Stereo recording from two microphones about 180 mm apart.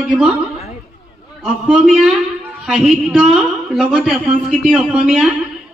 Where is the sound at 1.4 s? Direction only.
Centre (ahead or behind).